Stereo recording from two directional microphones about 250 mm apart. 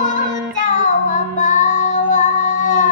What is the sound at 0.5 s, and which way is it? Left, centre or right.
Child singing, left.